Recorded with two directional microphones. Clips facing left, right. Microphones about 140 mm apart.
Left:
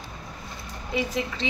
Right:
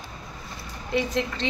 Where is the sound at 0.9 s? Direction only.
5° left (ahead or behind).